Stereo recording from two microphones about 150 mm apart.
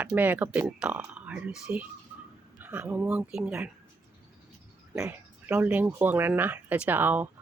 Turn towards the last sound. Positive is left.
turn(degrees=-10)  # may be behind; listen again after turning